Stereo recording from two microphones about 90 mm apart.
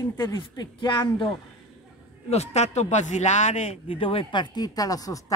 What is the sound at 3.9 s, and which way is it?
A woman's voice, 85° left.